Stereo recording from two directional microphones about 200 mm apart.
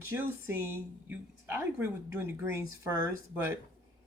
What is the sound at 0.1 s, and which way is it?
Speech, 10° right (ahead or behind).